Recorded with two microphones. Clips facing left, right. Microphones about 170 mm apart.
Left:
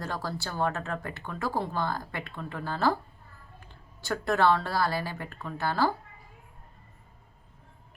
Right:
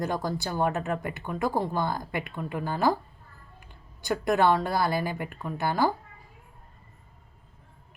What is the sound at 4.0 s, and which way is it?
Speech, 15° right (ahead or behind).